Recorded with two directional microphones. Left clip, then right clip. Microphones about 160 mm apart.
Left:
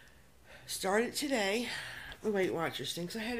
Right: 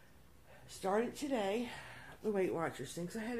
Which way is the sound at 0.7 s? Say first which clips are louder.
Left 4 dB; 20° left (ahead or behind).